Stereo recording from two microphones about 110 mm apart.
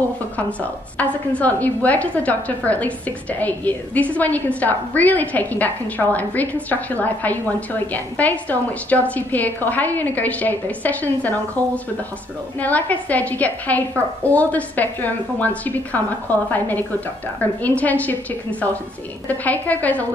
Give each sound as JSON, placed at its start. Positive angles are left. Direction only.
{"t": 0.4, "sound": "a woman's voice", "side_deg": 15}